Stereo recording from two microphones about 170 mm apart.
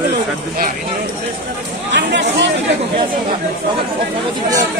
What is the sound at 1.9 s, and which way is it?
Chatter, 90° right.